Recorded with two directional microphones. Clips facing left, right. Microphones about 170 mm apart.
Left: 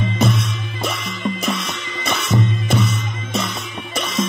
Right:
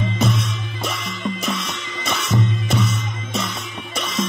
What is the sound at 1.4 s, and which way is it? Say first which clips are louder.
Music: left 2 dB; 60° left (ahead or behind).